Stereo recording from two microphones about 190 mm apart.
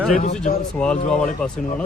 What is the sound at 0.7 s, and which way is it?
Speech, 5° left (ahead or behind).